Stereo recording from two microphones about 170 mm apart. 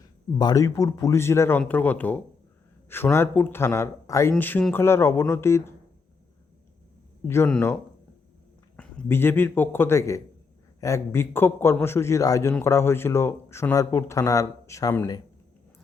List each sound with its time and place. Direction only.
0.0 s a man's voice: 20° left (ahead or behind)
7.3 s a man's voice: 15° left (ahead or behind)